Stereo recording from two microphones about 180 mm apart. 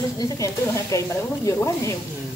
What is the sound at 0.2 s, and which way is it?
Speech, 15° left (ahead or behind).